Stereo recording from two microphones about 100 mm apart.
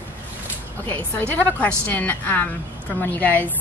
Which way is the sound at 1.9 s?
15° left (ahead or behind).